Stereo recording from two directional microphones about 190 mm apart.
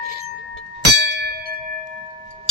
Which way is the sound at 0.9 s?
65° right (ahead or behind).